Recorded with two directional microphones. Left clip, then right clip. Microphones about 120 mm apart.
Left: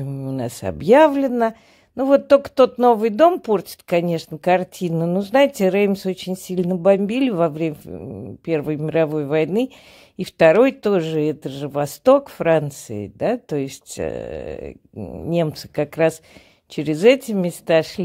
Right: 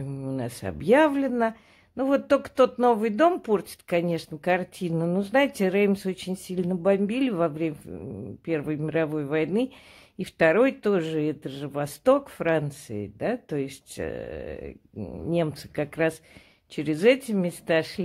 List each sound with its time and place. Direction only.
0.0 s a sound: 20° left (ahead or behind)
0.4 s speech: 35° left (ahead or behind)
15.0 s speech: 20° left (ahead or behind)
15.3 s speech: 35° left (ahead or behind)